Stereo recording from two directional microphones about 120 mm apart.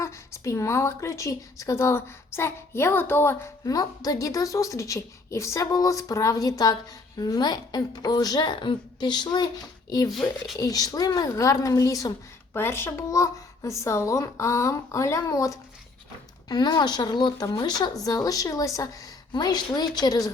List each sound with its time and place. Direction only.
0.0 s a woman's voice: 25° left (ahead or behind)
10.1 s speech: centre (ahead or behind)
10.6 s a woman's voice: 30° left (ahead or behind)